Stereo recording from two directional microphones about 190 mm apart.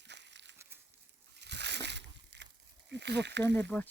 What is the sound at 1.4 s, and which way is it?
Slosh, 65° right (ahead or behind).